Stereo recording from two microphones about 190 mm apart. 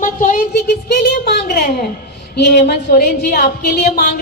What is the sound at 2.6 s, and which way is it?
A woman's voice, 55° left (ahead or behind).